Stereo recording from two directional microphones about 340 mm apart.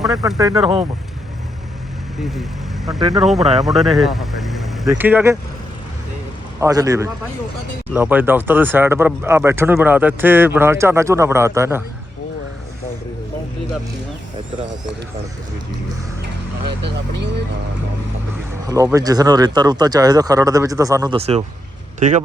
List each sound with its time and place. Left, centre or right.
0.0 s speech: centre
2.8 s speech: centre
6.6 s speech: centre
16.8 s speech: right
18.7 s speech: centre